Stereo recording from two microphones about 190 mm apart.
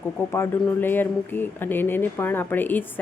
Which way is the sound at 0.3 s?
10° left (ahead or behind).